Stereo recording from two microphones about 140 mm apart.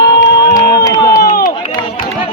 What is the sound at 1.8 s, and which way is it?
Chatter, 40° left (ahead or behind).